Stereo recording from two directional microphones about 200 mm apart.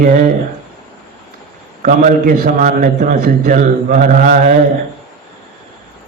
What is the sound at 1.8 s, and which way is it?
A man's voice, 40° right (ahead or behind).